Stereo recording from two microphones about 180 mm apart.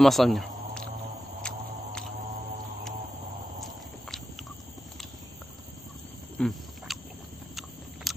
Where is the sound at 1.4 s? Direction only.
5° left (ahead or behind).